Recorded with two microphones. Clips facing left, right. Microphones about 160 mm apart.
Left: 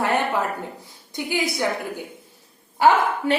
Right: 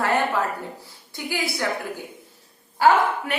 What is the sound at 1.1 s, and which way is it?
Speech, 20° left (ahead or behind).